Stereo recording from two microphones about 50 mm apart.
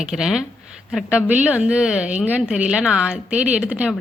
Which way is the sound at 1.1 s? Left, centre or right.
Right.